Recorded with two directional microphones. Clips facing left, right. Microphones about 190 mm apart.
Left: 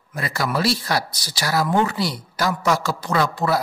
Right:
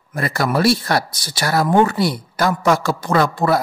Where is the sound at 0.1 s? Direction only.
50° right (ahead or behind).